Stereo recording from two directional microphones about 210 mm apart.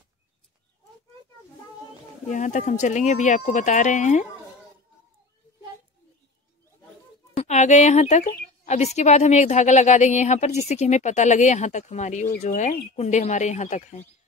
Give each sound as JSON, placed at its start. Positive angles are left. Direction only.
{"t": 2.2, "sound": "speech", "side_deg": 35}
{"t": 7.3, "sound": "a woman's voice", "side_deg": 35}